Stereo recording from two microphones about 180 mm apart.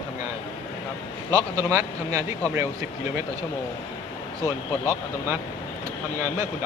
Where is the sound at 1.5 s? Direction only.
15° right (ahead or behind).